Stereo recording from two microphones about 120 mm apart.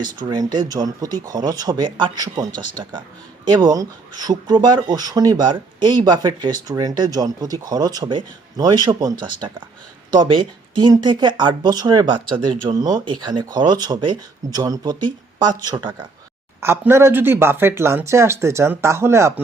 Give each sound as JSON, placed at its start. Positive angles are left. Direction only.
{"t": 0.0, "sound": "speech", "side_deg": -35}
{"t": 16.6, "sound": "speech", "side_deg": -20}